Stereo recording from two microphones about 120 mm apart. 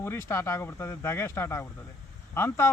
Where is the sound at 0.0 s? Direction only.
20° left (ahead or behind).